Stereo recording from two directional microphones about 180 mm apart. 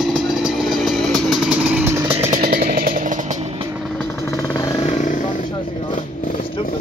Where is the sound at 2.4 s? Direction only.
55° right (ahead or behind).